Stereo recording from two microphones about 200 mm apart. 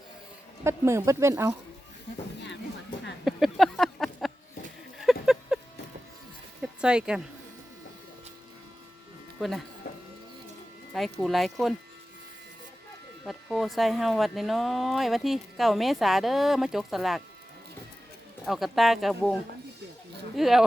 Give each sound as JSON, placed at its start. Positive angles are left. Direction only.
{"t": 0.6, "sound": "speech", "side_deg": -15}
{"t": 3.2, "sound": "a sound", "side_deg": 0}
{"t": 6.6, "sound": "music", "side_deg": -5}
{"t": 9.4, "sound": "speech", "side_deg": 0}
{"t": 9.8, "sound": "printer", "side_deg": 50}
{"t": 10.9, "sound": "speech", "side_deg": 0}
{"t": 13.2, "sound": "speech", "side_deg": 0}
{"t": 18.4, "sound": "speech", "side_deg": 0}